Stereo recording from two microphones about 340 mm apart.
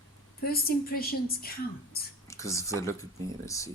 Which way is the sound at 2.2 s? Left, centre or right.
Centre.